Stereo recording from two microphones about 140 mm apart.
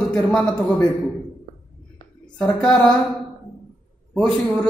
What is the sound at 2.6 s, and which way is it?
Speech, 5° left (ahead or behind).